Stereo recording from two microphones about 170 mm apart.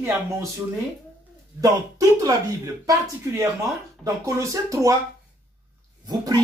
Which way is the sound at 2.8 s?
20° right (ahead or behind).